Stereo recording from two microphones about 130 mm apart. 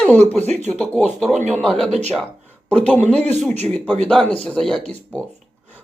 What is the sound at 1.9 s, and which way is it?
Speech, 55° right (ahead or behind).